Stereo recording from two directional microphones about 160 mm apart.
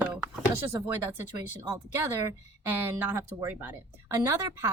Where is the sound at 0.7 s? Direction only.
15° right (ahead or behind).